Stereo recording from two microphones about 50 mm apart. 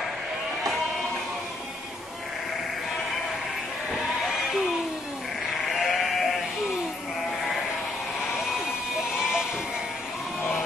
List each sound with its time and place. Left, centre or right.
5.8 s sheep: centre